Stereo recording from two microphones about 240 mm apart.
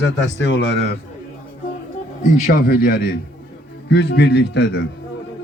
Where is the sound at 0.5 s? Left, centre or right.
Left.